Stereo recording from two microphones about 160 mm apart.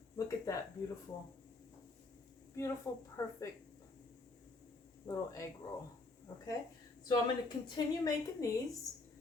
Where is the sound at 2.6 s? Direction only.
20° left (ahead or behind).